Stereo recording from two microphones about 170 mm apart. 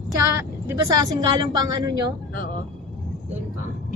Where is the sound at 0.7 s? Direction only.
20° right (ahead or behind).